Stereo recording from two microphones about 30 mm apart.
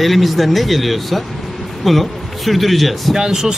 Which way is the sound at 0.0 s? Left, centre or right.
Centre.